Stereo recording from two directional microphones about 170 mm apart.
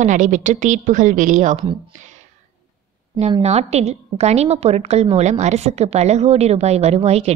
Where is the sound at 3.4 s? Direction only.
40° right (ahead or behind).